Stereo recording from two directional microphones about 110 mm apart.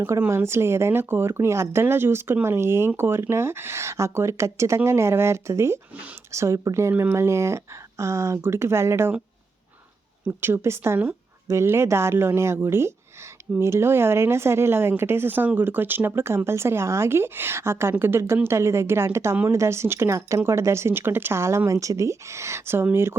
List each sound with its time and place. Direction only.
0.0 s speech: 20° right (ahead or behind)
10.2 s speech: 20° right (ahead or behind)